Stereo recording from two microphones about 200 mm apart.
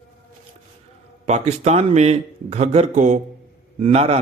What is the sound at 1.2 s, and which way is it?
A man's voice, 35° right (ahead or behind).